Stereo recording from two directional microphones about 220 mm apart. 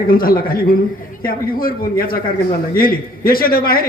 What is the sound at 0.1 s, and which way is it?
A man's voice, 40° left (ahead or behind).